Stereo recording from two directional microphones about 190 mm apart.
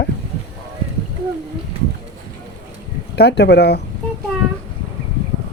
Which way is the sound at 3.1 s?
60° left (ahead or behind).